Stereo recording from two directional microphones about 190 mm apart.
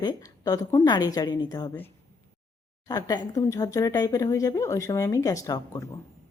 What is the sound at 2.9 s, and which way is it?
Speech, 20° left (ahead or behind).